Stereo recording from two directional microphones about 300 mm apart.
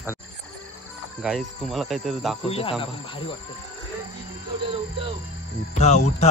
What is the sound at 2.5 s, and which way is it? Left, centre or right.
Speech, centre.